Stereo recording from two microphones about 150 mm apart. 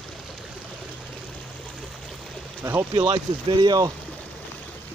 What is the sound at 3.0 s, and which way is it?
Speech, 30° right (ahead or behind).